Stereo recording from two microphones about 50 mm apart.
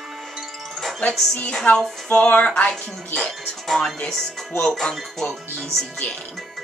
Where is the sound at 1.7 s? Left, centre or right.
Left.